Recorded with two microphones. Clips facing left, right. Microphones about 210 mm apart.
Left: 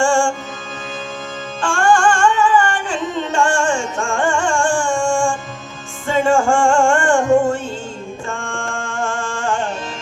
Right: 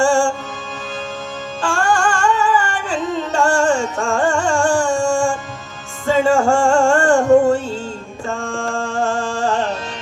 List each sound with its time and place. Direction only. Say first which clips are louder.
0.0 s music: right 1 dB; 40° right (ahead or behind)
1.6 s music: left 3 dB; 40° right (ahead or behind)